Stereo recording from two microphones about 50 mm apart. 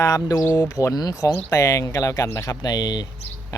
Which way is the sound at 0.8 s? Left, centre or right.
Left.